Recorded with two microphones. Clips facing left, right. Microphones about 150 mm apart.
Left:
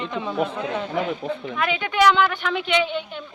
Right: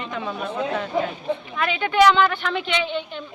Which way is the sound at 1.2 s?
90° left.